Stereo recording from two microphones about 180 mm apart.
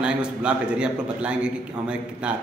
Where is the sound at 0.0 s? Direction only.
5° right (ahead or behind).